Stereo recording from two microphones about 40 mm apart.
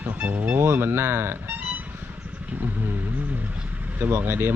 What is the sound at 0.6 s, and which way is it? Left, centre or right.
Speech, right.